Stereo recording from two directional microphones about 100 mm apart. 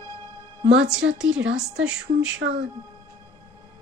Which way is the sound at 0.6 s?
10° right (ahead or behind).